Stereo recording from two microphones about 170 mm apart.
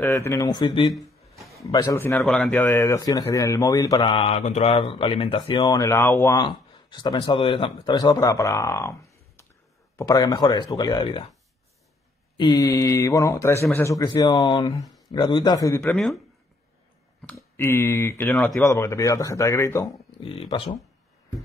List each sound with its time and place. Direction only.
0.0 s speech: 15° left (ahead or behind)
0.9 s a sound: centre (ahead or behind)
1.6 s speech: 20° left (ahead or behind)
2.1 s speech: 5° left (ahead or behind)
2.7 s speech: 20° left (ahead or behind)
6.3 s speech: 25° left (ahead or behind)
9.9 s speech: 20° left (ahead or behind)
12.4 s speech: 20° left (ahead or behind)
14.8 s a sound: centre (ahead or behind)
15.0 s speech: 25° left (ahead or behind)
17.6 s speech: 15° left (ahead or behind)
18.6 s speech: 15° left (ahead or behind)
20.2 s speech: 35° left (ahead or behind)